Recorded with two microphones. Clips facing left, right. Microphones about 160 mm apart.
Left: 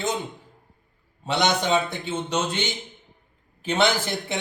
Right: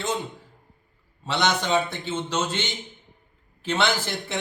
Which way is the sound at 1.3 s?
15° left (ahead or behind).